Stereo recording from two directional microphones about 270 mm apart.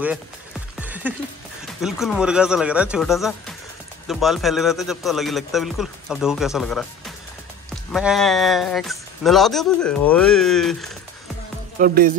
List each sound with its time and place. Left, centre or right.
0.7 s music: centre
1.8 s speech: centre
11.8 s music: right